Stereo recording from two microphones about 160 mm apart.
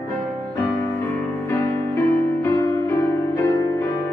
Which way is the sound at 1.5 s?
15° left (ahead or behind).